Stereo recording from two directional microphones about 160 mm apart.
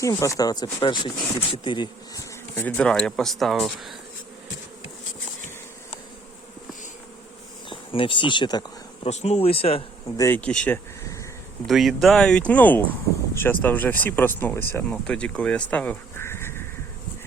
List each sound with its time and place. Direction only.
0.0 s speech: 20° left (ahead or behind)
2.6 s speech: 10° left (ahead or behind)
7.7 s speech: 30° left (ahead or behind)
9.0 s speech: 45° left (ahead or behind)
10.2 s speech: 15° left (ahead or behind)